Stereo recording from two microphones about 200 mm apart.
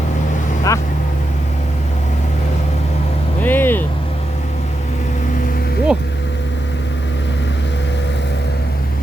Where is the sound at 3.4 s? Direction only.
10° left (ahead or behind).